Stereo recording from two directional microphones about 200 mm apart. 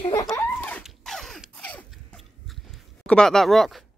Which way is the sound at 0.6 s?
10° left (ahead or behind).